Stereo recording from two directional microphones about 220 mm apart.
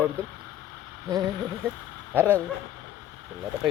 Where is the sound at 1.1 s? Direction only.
15° right (ahead or behind).